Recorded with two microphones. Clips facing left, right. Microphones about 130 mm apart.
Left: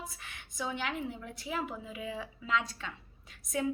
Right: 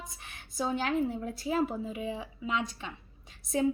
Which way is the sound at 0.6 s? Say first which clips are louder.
Right 6 dB; 40° right (ahead or behind).